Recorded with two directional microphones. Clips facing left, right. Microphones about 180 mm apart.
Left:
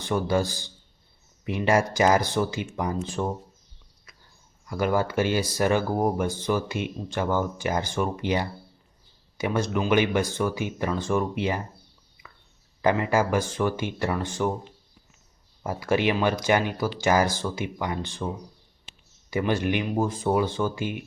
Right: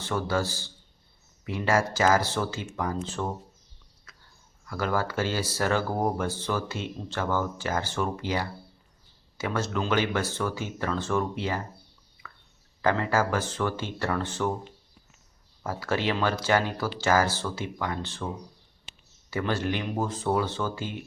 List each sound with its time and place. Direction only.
0.0 s speech: 15° left (ahead or behind)
4.1 s a sound: 15° left (ahead or behind)
4.6 s speech: 15° left (ahead or behind)
12.8 s speech: 15° left (ahead or behind)
15.6 s speech: 15° left (ahead or behind)
19.3 s speech: 15° left (ahead or behind)